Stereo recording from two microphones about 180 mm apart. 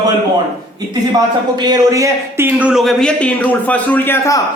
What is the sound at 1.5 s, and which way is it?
A man's voice, 20° right (ahead or behind).